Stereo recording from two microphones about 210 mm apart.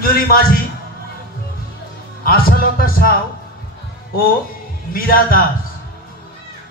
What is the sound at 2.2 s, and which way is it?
Speech, 45° left (ahead or behind).